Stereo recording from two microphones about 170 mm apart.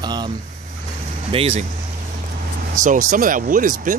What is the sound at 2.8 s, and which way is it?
Speech, 50° right (ahead or behind).